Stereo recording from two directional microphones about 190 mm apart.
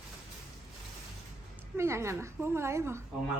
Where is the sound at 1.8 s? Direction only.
15° right (ahead or behind).